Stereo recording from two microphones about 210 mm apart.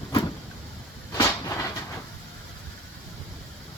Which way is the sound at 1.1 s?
15° left (ahead or behind).